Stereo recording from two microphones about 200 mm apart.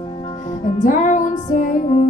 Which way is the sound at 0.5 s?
40° left (ahead or behind).